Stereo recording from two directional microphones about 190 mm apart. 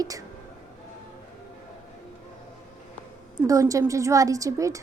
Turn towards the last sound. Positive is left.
turn(degrees=-15)  # may be behind; listen again after turning